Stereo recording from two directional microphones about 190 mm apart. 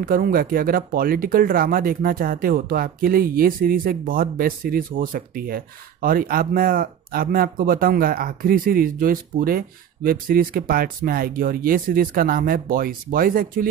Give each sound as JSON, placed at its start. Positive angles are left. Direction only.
{"t": 0.0, "sound": "speech", "side_deg": -50}